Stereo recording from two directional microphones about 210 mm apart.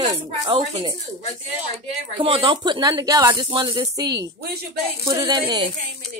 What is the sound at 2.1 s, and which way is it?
Speech, 25° right (ahead or behind).